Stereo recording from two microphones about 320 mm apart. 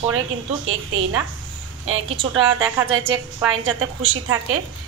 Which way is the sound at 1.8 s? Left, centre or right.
Right.